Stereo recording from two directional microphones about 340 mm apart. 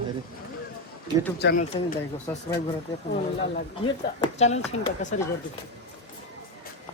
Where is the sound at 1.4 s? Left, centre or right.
Left.